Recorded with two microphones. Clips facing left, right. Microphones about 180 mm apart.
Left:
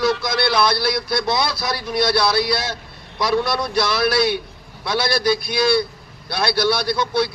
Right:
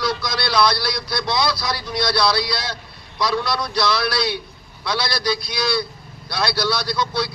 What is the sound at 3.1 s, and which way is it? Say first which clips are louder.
Speech: left 2 dB; 25° left (ahead or behind).